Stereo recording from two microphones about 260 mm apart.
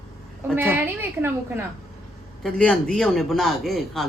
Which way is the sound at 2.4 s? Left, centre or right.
Centre.